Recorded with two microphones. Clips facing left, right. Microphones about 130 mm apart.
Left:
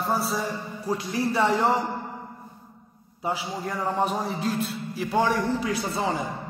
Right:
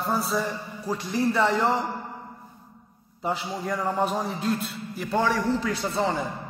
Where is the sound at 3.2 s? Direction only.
10° left (ahead or behind).